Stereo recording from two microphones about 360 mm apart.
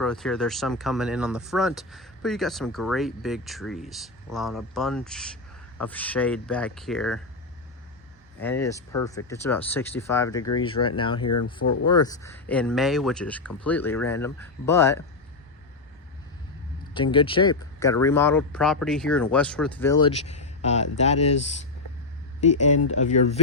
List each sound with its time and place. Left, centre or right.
0.0 s speech: centre
8.4 s speech: centre
11.6 s speech: left
11.9 s speech: centre
16.9 s speech: centre
22.4 s speech: centre